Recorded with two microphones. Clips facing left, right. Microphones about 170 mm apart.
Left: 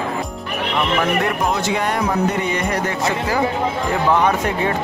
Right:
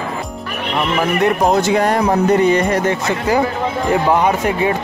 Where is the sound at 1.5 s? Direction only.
40° right (ahead or behind).